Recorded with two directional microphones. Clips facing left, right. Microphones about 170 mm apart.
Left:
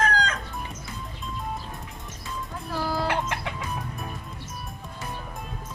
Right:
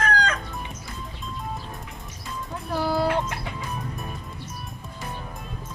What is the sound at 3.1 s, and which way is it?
Music, 80° left.